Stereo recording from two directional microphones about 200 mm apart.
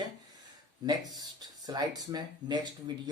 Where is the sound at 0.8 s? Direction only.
20° right (ahead or behind).